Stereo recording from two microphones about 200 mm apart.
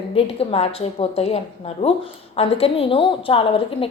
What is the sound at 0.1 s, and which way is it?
A woman's voice, 30° left (ahead or behind).